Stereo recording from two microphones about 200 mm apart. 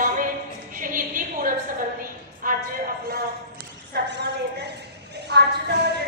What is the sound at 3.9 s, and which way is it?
A woman's voice, 60° right (ahead or behind).